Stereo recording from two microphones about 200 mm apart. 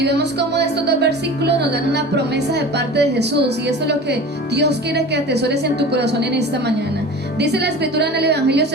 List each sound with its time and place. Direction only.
0.0 s speech: 55° right (ahead or behind)